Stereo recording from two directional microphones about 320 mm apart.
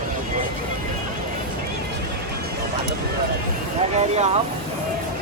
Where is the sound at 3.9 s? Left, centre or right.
Centre.